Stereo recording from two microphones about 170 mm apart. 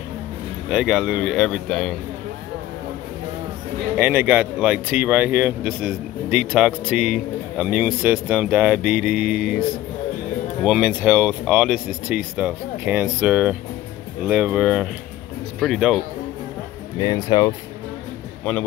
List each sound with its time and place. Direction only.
0.7 s speech: 5° right (ahead or behind)
3.9 s speech: 10° right (ahead or behind)
10.6 s speech: centre (ahead or behind)
17.0 s speech: 25° left (ahead or behind)